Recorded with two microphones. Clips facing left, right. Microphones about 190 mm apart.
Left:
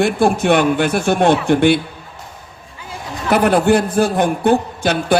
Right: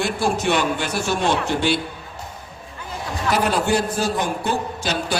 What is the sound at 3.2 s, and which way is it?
A man's voice, 55° left (ahead or behind).